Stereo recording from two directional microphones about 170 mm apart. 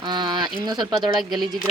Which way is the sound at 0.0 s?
25° right (ahead or behind).